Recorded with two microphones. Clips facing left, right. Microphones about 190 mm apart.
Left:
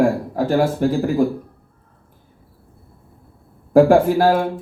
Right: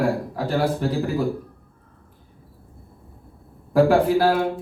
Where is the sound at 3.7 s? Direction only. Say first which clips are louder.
Left 4 dB; 50° left (ahead or behind).